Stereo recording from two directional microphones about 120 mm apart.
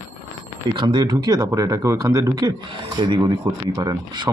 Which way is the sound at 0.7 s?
40° right (ahead or behind).